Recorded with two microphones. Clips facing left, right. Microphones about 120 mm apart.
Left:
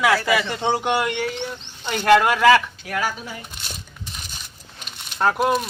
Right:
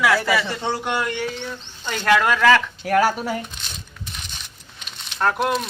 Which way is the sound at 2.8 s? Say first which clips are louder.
Right 8 dB; 50° right (ahead or behind).